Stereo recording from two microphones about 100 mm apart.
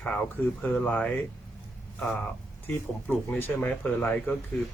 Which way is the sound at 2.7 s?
20° left (ahead or behind).